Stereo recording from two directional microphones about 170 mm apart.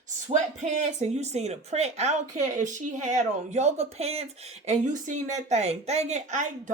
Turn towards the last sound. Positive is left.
turn(degrees=-45)  # may be behind; listen again after turning